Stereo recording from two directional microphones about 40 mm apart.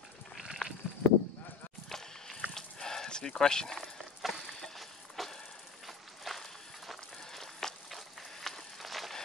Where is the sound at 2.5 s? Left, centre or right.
Centre.